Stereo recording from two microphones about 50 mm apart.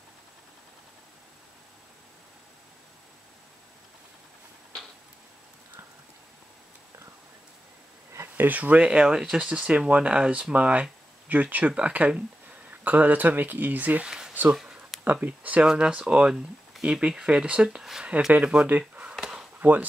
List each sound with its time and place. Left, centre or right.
8.4 s speech: right; by 9.5 s centre
9.5 s speech: right
14.0 s a sound: centre
15.1 s speech: right
15.6 s speech: centre
18.4 s speech: right
19.1 s a sound: centre
19.6 s speech: right